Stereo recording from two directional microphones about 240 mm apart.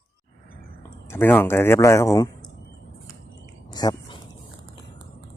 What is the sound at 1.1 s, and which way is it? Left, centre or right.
Speech, centre.